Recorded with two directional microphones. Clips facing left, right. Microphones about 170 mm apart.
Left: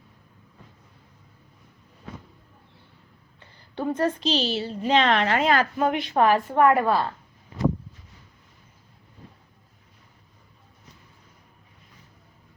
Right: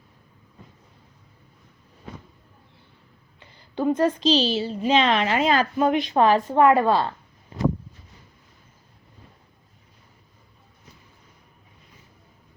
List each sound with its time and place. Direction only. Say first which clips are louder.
3.4 s a sound: right 5 dB; 15° right (ahead or behind)
4.2 s a woman's voice: right 5 dB; 90° right
4.5 s a woman's voice: right 1 dB; 15° right (ahead or behind)